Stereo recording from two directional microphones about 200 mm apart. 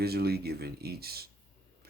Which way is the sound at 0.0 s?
50° right (ahead or behind).